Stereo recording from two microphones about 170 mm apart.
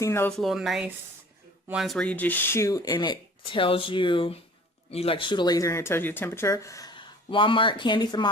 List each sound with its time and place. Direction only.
0.0 s speech: 15° left (ahead or behind)
0.3 s speech: centre (ahead or behind); by 8.3 s 25° left (ahead or behind)